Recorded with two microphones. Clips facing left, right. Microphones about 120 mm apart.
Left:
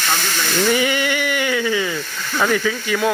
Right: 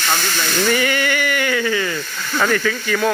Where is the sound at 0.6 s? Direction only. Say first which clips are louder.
Left 1 dB; 15° left (ahead or behind).